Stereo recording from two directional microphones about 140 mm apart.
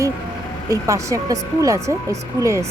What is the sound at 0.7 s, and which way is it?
Speech, 20° right (ahead or behind).